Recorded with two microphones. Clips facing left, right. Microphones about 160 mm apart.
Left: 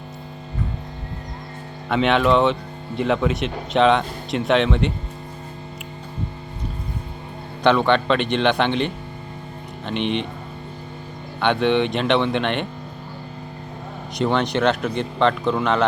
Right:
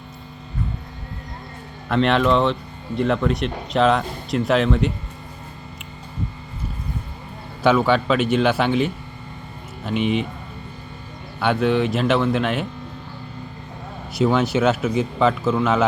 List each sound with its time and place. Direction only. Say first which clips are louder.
1.9 s speech: even; centre (ahead or behind)
7.6 s speech: even; 5° right (ahead or behind)
11.3 s speech: even; 5° right (ahead or behind)
14.2 s speech: right 2 dB; 5° right (ahead or behind)